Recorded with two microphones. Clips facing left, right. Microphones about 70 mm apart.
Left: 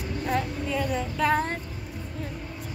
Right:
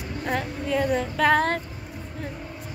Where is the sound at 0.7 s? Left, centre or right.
Right.